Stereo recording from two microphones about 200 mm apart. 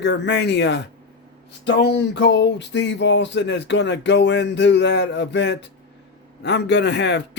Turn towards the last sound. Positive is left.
turn(degrees=60)  # may be behind; listen again after turning